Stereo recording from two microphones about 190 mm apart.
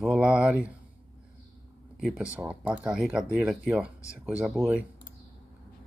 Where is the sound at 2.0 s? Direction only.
Centre (ahead or behind).